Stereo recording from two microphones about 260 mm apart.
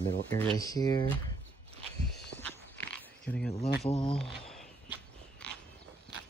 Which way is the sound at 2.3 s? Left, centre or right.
Centre.